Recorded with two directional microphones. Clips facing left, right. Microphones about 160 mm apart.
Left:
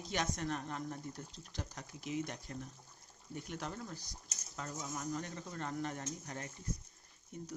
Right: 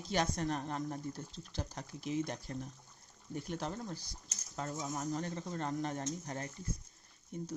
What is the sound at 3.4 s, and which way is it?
Speech, 30° right (ahead or behind).